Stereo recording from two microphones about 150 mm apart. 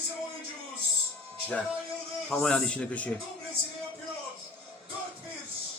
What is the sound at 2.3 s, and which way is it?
Speech, 5° left (ahead or behind).